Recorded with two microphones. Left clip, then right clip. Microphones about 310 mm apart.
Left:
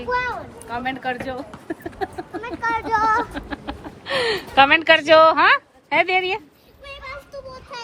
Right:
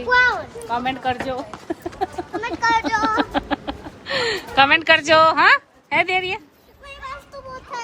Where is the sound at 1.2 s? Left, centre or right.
Centre.